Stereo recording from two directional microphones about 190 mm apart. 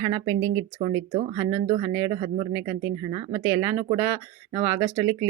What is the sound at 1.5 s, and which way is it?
Speech, 35° right (ahead or behind).